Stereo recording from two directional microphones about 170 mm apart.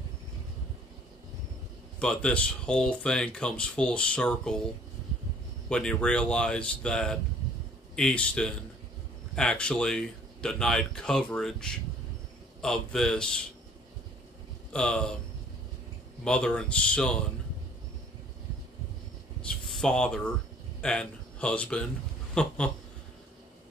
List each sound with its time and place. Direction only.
2.0 s speech: 5° left (ahead or behind)
5.7 s speech: 5° left (ahead or behind)
14.7 s speech: 5° left (ahead or behind)
16.3 s speech: 5° left (ahead or behind)
19.4 s a sound: 5° left (ahead or behind)
20.8 s speech: 5° left (ahead or behind)